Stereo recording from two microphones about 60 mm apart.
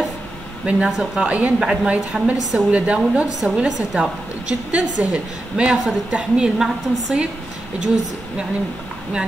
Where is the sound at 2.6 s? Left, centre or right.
Right.